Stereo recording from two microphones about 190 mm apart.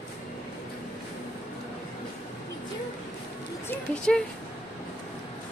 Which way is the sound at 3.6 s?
10° left (ahead or behind).